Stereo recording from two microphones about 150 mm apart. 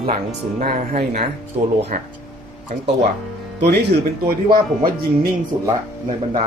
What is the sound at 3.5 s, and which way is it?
Speech, 90° right.